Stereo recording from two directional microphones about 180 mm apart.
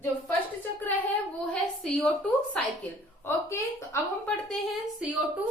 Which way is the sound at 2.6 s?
5° left (ahead or behind).